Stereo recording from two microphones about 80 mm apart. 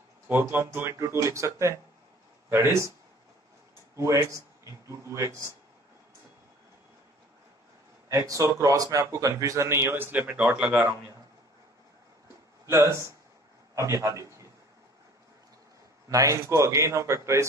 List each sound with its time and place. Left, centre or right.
0.3 s speech: right
3.9 s speech: right
8.1 s speech: right
10.1 s speech: centre
12.6 s a man's voice: right
16.1 s speech: right